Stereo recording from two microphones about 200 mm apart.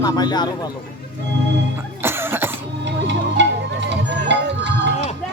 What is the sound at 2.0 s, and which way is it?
Cough, 10° right (ahead or behind).